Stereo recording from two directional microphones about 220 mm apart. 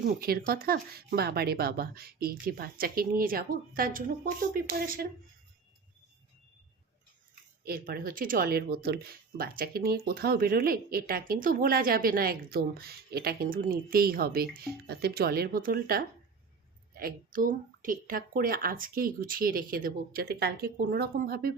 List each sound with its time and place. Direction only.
0.2 s speech: 45° right (ahead or behind)
7.6 s a woman's voice: 45° right (ahead or behind)